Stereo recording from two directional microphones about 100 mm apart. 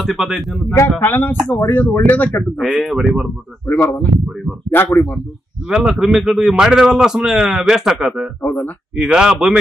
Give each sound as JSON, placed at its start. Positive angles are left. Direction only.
{"t": 0.0, "sound": "a man's voice", "side_deg": 0}
{"t": 0.8, "sound": "speech", "side_deg": 20}
{"t": 2.9, "sound": "a man's voice", "side_deg": -5}
{"t": 3.6, "sound": "speech", "side_deg": 20}
{"t": 5.7, "sound": "a man's voice", "side_deg": -5}
{"t": 8.4, "sound": "speech", "side_deg": 20}
{"t": 8.9, "sound": "a man's voice", "side_deg": -5}